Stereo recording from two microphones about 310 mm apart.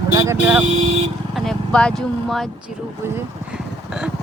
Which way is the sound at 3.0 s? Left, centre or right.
Centre.